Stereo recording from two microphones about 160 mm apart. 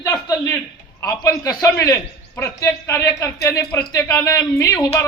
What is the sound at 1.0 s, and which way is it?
A man's voice, 20° left (ahead or behind).